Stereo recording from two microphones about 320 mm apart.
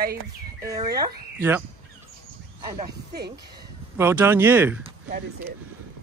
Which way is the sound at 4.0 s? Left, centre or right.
Centre.